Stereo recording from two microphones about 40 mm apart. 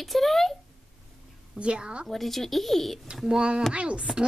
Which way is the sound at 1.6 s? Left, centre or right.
Right.